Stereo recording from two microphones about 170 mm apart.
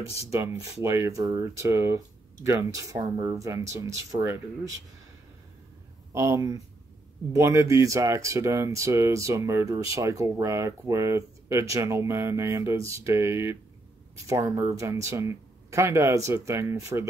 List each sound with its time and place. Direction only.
0.3 s speech: 20° right (ahead or behind)
6.1 s speech: 15° right (ahead or behind)